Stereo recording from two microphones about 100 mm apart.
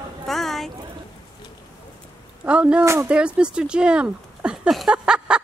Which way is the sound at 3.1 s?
10° right (ahead or behind).